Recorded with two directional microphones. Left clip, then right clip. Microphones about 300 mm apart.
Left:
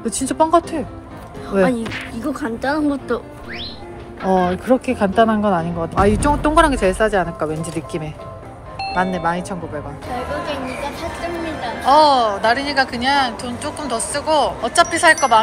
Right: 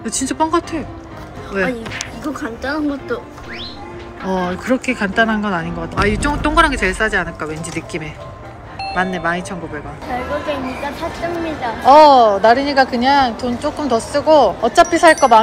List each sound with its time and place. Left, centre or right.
0.0 s speech: centre
2.3 s speech: left
4.2 s speech: centre
11.0 s speech: centre
11.8 s speech: centre